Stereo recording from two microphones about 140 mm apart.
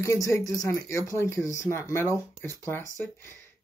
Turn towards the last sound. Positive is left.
turn(degrees=20)  # may be behind; listen again after turning